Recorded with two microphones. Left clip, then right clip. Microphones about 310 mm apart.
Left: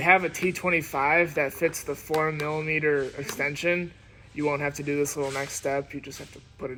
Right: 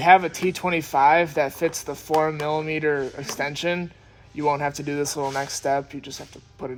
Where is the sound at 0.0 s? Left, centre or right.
Right.